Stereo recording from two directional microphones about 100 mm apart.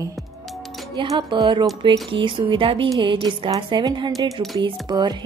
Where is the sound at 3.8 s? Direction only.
45° right (ahead or behind).